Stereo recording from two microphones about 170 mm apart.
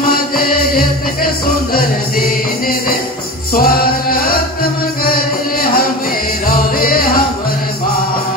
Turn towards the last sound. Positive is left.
turn(degrees=60)  # may be behind; listen again after turning